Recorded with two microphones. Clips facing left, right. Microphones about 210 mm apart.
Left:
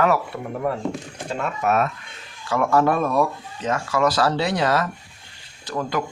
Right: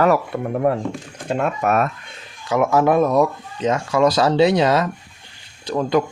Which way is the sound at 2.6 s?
10° right (ahead or behind).